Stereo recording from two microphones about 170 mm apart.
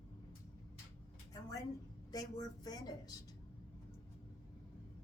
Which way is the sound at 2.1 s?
20° left (ahead or behind).